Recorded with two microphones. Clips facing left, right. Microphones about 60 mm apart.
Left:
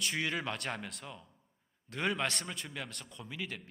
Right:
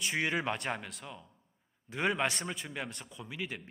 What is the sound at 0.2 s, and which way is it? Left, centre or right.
Speech, centre.